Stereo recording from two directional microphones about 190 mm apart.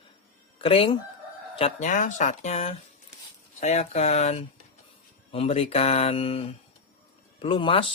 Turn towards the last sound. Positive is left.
turn(degrees=30)  # may be behind; listen again after turning